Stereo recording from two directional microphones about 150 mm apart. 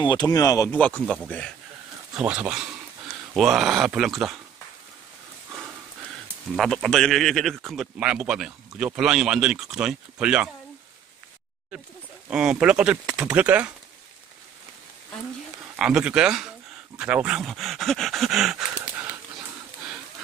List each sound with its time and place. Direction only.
0.0 s speech: 30° left (ahead or behind)
0.7 s speech: 10° left (ahead or behind)
2.1 s speech: 5° right (ahead or behind)
6.5 s speech: centre (ahead or behind)
12.3 s speech: 5° right (ahead or behind)
15.7 s speech: 5° right (ahead or behind)